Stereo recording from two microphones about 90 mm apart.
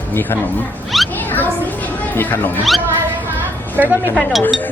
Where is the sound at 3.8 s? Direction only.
20° right (ahead or behind).